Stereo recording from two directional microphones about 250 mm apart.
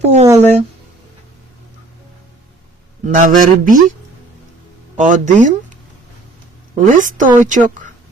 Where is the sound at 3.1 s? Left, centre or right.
Right.